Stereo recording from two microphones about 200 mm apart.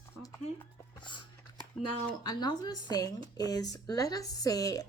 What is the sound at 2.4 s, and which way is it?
A woman's voice, 20° left (ahead or behind).